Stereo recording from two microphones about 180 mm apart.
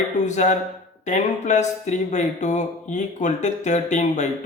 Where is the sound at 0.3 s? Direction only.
40° left (ahead or behind).